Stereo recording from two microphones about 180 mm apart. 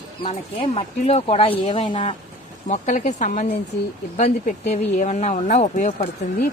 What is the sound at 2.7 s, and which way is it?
Speech, 40° left (ahead or behind).